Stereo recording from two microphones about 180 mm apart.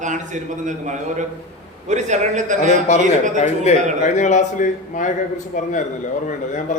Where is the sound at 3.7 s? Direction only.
35° left (ahead or behind).